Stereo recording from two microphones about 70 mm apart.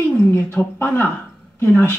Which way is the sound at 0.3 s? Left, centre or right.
Left.